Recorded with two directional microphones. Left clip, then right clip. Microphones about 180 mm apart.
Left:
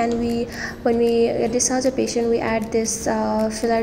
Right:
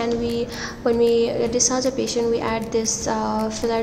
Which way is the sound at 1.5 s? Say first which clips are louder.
Even; 15° left (ahead or behind).